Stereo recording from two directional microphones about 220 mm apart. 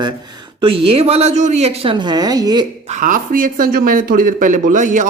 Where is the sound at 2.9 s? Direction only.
35° right (ahead or behind).